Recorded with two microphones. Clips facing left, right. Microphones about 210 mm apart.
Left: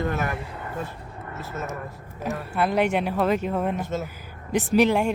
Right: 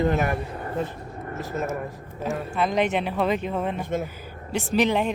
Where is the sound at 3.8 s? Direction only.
15° right (ahead or behind).